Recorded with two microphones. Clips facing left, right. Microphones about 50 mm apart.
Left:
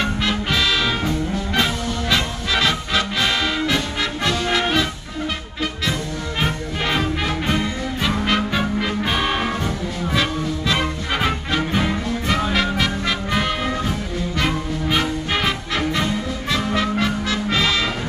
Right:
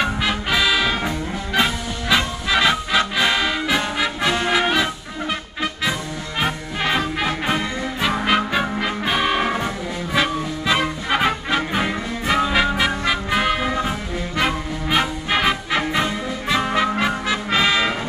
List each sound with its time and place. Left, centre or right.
0.0 s music: centre
4.5 s brass instrument: centre
6.4 s music: centre
12.5 s brass instrument: centre
13.8 s music: centre